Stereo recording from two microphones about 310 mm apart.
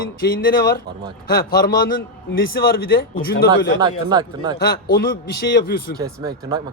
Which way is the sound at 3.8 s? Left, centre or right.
Centre.